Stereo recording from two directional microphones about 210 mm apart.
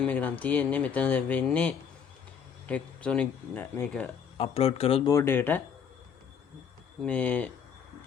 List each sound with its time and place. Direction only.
0.0 s speech: 5° left (ahead or behind)
4.4 s speech: 30° left (ahead or behind)
5.1 s speech: 10° left (ahead or behind)
7.0 s speech: 5° left (ahead or behind)